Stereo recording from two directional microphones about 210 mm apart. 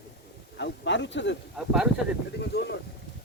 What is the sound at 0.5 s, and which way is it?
Speech, 60° left (ahead or behind).